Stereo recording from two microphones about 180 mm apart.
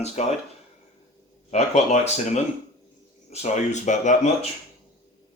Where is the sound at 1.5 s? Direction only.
40° left (ahead or behind).